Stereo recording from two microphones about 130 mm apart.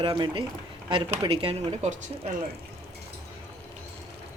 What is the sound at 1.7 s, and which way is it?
Speech, 60° right (ahead or behind).